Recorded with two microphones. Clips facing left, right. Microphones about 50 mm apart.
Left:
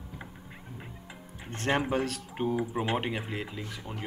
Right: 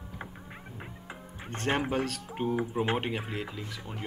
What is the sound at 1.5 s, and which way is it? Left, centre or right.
Speech, centre.